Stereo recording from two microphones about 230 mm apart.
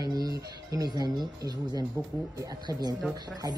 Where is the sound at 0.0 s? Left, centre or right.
Centre.